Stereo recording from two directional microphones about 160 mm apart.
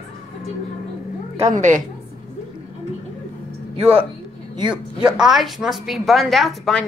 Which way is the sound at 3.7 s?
40° right (ahead or behind).